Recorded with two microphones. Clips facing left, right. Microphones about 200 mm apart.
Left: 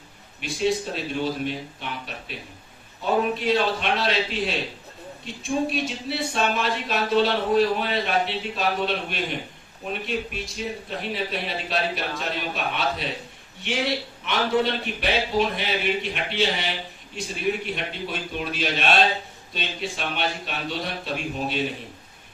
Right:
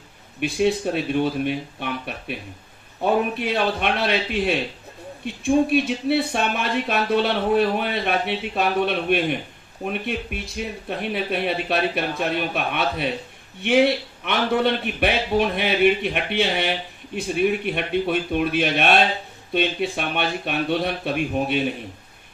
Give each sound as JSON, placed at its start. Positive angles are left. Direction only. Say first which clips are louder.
{"t": 0.3, "sound": "speech", "louder": "right 4 dB", "side_deg": -60}